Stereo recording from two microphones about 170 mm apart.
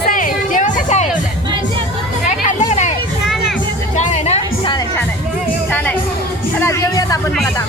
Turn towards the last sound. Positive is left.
turn(degrees=20)  # may be behind; listen again after turning